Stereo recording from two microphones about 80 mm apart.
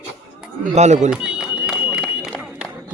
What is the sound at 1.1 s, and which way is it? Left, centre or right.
Run, centre.